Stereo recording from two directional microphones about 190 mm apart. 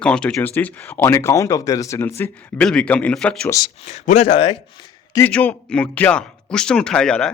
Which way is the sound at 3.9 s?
35° left (ahead or behind).